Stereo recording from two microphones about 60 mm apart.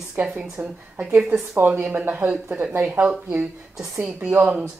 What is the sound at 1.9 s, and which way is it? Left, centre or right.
Speech, right.